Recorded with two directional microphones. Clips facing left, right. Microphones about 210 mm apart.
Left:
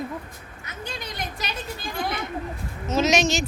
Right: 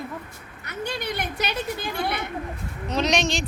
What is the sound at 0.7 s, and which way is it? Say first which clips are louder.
Speech: right 6 dB; 65° right (ahead or behind).